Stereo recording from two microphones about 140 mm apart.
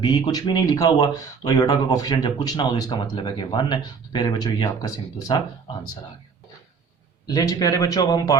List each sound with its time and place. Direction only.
0.0 s speech: 30° left (ahead or behind)
7.3 s speech: 25° left (ahead or behind)